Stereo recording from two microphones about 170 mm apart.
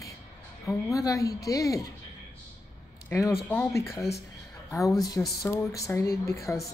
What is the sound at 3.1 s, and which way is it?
A woman's voice, 15° left (ahead or behind).